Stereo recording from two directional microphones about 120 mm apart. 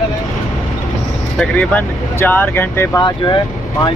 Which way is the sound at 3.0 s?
35° left (ahead or behind).